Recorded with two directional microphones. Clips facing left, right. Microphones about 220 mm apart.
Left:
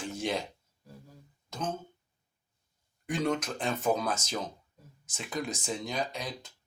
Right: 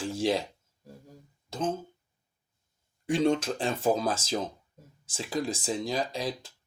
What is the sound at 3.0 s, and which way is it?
Speech, 30° right (ahead or behind).